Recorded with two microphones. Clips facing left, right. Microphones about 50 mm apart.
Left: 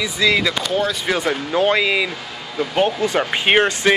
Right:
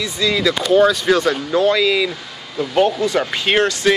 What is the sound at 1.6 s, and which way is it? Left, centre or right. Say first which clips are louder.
Speech: right 1 dB; left.